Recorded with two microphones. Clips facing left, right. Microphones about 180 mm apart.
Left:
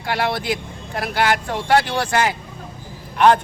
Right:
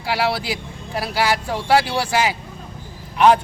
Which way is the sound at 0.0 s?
5° right (ahead or behind).